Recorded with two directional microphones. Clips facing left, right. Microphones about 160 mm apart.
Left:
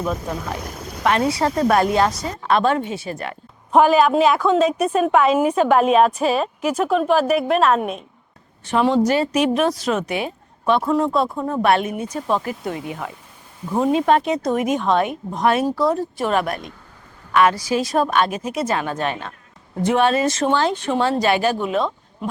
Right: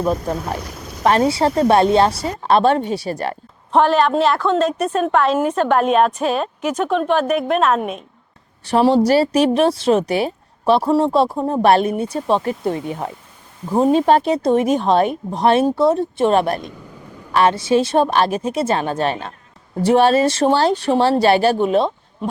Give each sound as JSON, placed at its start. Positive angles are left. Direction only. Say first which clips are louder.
{"t": 1.0, "sound": "a woman's voice", "louder": "right 3 dB", "side_deg": -35}
{"t": 3.7, "sound": "a woman's voice", "louder": "left 1 dB", "side_deg": 5}
{"t": 8.6, "sound": "a woman's voice", "louder": "right 3 dB", "side_deg": -35}